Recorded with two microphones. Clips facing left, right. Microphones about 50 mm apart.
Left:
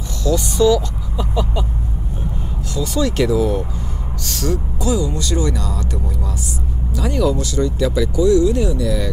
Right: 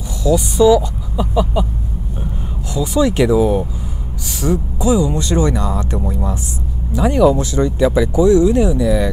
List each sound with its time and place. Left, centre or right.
0.2 s speech: centre
2.7 s speech: centre